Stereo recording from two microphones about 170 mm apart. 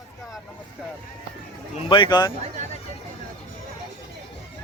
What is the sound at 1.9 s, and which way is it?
Speech, 25° left (ahead or behind).